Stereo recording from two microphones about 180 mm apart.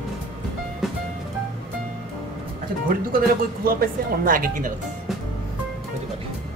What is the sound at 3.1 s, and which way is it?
Speech, 55° right (ahead or behind).